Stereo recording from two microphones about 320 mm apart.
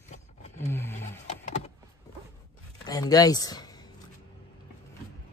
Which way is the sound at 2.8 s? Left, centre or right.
Centre.